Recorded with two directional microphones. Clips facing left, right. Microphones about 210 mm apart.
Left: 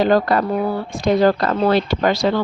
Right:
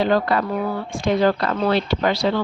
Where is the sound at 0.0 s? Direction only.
45° left (ahead or behind).